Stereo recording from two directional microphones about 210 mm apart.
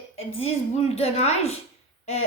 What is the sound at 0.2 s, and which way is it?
A woman's voice, 30° left (ahead or behind).